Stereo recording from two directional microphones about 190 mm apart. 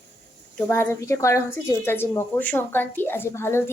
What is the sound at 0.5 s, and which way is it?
A woman's voice, 10° left (ahead or behind).